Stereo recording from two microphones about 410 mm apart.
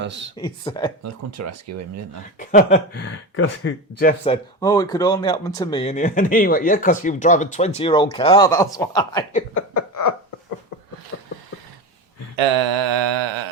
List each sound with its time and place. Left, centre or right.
0.0 s speech: right
0.3 s speech: centre
1.0 s speech: right
2.4 s speech: centre
9.6 s a sound: left
11.1 s a sound: left
12.4 s mantra: right